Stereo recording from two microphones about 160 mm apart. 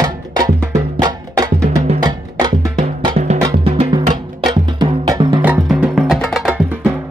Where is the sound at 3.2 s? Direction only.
40° right (ahead or behind).